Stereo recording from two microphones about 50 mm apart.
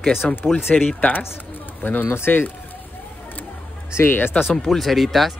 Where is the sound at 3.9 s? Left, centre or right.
Left.